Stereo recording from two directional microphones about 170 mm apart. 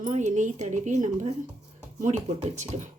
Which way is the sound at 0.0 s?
45° right (ahead or behind).